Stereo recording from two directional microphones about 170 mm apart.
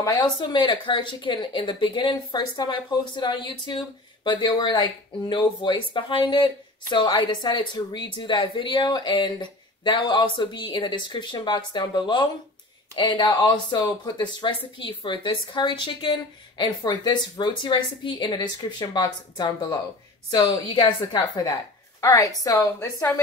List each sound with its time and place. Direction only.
0.0 s a woman's voice: 25° left (ahead or behind)